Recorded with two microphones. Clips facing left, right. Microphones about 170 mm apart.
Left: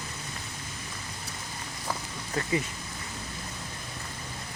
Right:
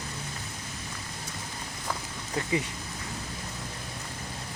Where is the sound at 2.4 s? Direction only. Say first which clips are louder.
Even; 20° right (ahead or behind).